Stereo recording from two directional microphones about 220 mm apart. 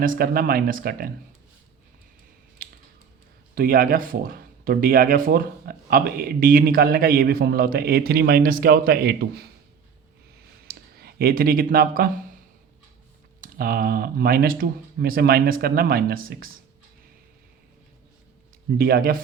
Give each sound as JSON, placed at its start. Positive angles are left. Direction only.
{"t": 0.0, "sound": "speech", "side_deg": -40}
{"t": 2.6, "sound": "typing", "side_deg": -40}
{"t": 3.5, "sound": "speech", "side_deg": -40}
{"t": 10.7, "sound": "speech", "side_deg": -45}
{"t": 13.4, "sound": "speech", "side_deg": -40}
{"t": 18.8, "sound": "speech", "side_deg": -45}